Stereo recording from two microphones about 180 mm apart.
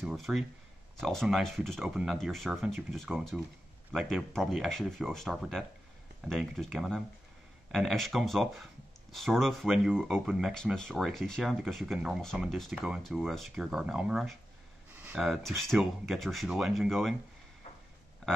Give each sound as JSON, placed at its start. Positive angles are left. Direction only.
{"t": 0.0, "sound": "speech", "side_deg": 0}